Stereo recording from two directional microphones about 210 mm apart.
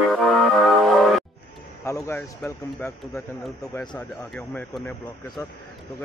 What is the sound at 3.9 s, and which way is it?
Speech, 5° left (ahead or behind).